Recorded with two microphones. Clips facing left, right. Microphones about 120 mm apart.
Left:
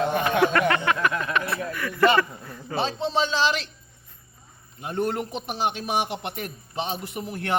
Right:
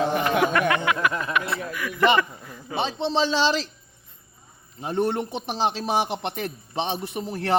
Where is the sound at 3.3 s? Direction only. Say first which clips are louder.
Right 2 dB; 35° right (ahead or behind).